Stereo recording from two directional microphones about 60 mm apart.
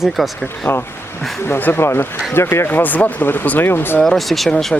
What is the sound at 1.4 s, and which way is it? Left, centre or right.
Speech, left.